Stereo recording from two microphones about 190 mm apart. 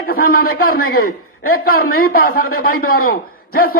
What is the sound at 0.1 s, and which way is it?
A man's voice, 50° left (ahead or behind).